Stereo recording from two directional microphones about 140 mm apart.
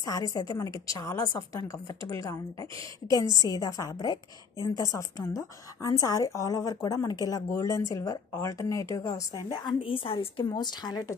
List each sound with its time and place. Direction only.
0.0 s a woman's voice: 25° left (ahead or behind)
3.4 s a woman's voice: 25° left (ahead or behind)
9.5 s a woman's voice: 35° left (ahead or behind)